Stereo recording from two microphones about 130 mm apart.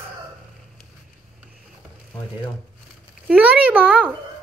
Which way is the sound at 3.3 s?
10° right (ahead or behind).